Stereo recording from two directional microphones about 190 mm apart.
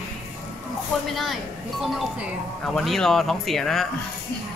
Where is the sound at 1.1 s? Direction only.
Centre (ahead or behind).